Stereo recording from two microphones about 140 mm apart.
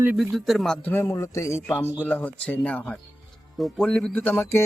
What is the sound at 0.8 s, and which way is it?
Speech, 15° left (ahead or behind).